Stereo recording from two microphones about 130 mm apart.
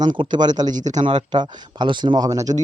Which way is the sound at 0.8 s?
65° right (ahead or behind).